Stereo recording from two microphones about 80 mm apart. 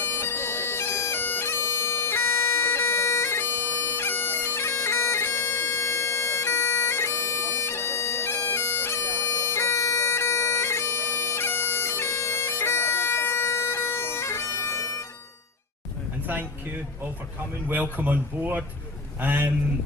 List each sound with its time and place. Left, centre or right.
0.0 s bagpipes: left
16.2 s a sound: right
17.9 s speech: right